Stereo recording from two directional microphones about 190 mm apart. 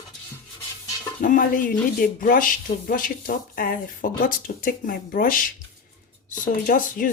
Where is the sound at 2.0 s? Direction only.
45° left (ahead or behind).